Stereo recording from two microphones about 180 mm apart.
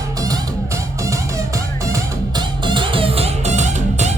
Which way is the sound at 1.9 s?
25° right (ahead or behind).